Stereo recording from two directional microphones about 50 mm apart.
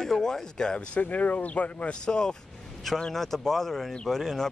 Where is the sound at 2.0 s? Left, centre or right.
Centre.